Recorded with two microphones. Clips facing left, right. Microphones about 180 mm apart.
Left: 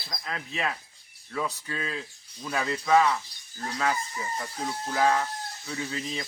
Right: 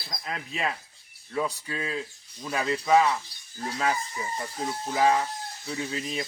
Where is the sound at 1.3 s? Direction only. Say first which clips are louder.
Right 2 dB; 10° right (ahead or behind).